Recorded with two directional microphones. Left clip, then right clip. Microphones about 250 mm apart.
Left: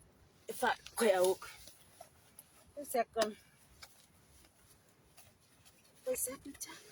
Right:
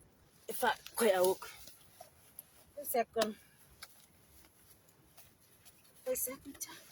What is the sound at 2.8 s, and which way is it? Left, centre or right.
Speech, centre.